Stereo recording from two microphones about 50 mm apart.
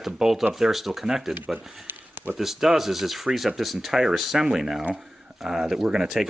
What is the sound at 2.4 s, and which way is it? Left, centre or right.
Speech, centre.